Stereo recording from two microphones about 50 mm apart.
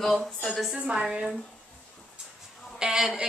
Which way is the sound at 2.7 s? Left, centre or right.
Centre.